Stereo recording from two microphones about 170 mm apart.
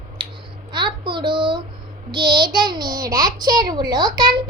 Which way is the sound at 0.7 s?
30° right (ahead or behind).